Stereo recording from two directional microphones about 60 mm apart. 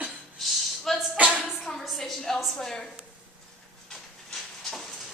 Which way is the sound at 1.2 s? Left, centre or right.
Right.